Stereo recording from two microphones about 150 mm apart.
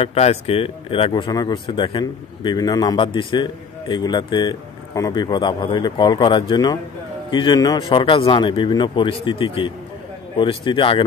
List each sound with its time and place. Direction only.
0.0 s speech: 40° left (ahead or behind)